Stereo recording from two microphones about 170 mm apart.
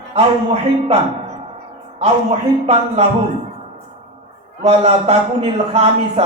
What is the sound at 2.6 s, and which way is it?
Speech, 35° right (ahead or behind).